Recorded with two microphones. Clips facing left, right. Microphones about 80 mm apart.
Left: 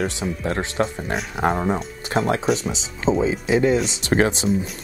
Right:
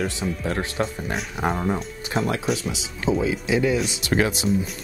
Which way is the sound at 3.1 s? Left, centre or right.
Left.